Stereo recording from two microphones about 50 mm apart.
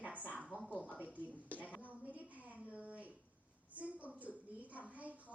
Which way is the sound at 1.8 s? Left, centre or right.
Right.